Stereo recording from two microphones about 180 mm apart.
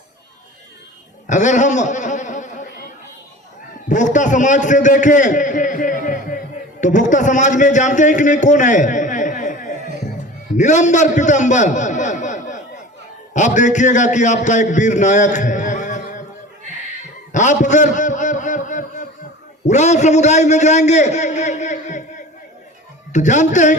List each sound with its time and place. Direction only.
1.3 s a man's voice: 45° left (ahead or behind)
3.8 s a man's voice: 45° left (ahead or behind)
17.3 s a sound: 40° left (ahead or behind)
19.6 s a man's voice: 40° left (ahead or behind)